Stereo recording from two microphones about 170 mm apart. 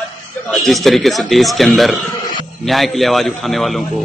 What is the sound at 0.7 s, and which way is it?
Speech, centre (ahead or behind).